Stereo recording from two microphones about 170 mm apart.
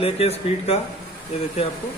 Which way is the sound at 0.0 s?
35° left (ahead or behind).